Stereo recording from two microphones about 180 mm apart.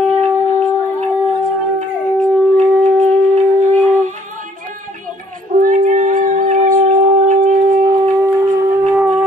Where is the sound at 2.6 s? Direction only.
45° right (ahead or behind).